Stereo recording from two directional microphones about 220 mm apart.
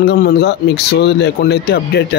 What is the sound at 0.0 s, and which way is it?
Speech, 50° left (ahead or behind).